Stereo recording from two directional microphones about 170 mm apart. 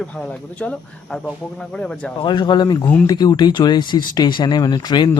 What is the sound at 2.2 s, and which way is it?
Speech, 25° left (ahead or behind).